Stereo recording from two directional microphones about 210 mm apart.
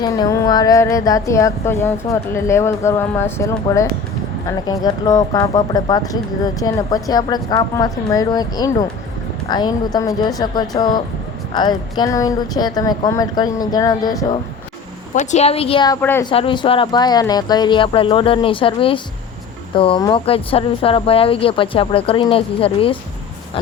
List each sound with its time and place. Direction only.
0.0 s speech: 15° left (ahead or behind)
15.1 s speech: 35° left (ahead or behind)
16.0 s speech: 10° left (ahead or behind)
16.2 s speech: 25° left (ahead or behind)